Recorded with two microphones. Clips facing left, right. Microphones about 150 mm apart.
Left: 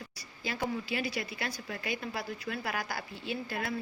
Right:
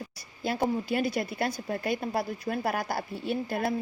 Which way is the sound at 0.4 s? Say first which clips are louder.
Right 6 dB; 50° right (ahead or behind).